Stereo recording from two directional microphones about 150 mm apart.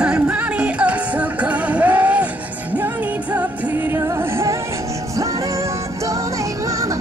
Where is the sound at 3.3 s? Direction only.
15° right (ahead or behind).